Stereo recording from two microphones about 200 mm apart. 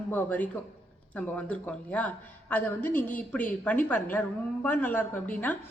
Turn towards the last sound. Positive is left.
turn(degrees=10)  # may be behind; listen again after turning